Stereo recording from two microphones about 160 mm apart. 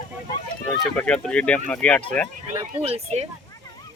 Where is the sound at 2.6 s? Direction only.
40° right (ahead or behind).